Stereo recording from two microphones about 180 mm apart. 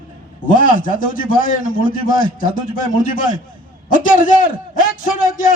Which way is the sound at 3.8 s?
50° left (ahead or behind).